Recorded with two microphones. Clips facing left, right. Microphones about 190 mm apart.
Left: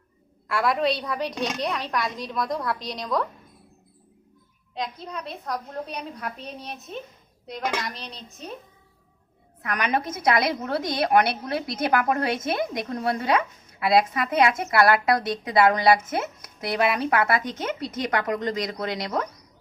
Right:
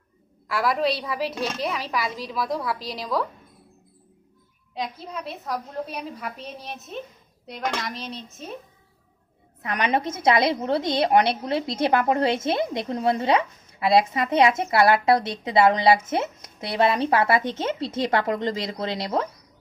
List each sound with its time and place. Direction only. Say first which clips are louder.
0.4 s a woman's voice: even; centre (ahead or behind)
4.7 s a woman's voice: right 1 dB; 5° right (ahead or behind)
9.6 s a woman's voice: right 2 dB; 25° right (ahead or behind)